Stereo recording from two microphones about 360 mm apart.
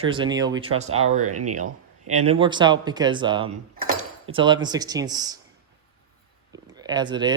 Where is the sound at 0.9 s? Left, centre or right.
Right.